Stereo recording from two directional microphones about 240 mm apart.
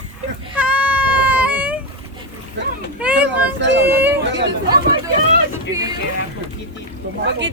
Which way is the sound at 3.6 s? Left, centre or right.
Right.